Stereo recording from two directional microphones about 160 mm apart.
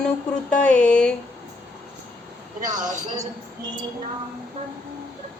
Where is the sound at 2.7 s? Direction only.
50° right (ahead or behind).